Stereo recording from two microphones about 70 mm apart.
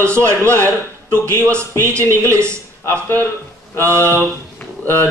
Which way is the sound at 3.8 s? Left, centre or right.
Right.